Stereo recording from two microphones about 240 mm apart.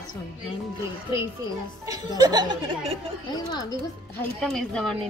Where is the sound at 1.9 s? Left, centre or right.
Centre.